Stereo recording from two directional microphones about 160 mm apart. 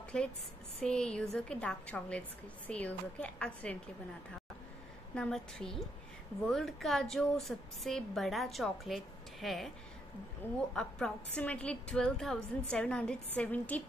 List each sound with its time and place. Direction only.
0.1 s a woman's voice: 5° left (ahead or behind)
5.1 s a woman's voice: 5° left (ahead or behind)
10.7 s a woman's voice: 5° left (ahead or behind)